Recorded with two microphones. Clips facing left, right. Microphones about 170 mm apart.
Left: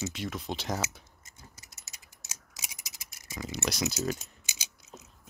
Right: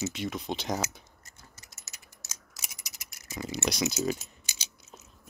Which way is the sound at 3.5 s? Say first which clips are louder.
Right 2 dB; centre (ahead or behind).